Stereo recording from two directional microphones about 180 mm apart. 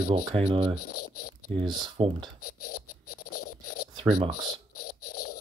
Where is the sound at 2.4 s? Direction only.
55° left (ahead or behind).